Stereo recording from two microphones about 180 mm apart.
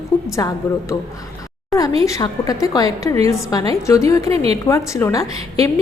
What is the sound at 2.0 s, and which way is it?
A woman's voice, 20° left (ahead or behind).